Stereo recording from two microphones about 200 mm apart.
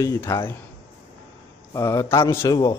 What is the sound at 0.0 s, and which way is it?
Speech, 15° left (ahead or behind).